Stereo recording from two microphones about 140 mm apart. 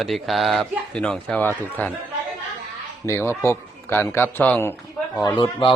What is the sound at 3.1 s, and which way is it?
A man's voice, 20° left (ahead or behind).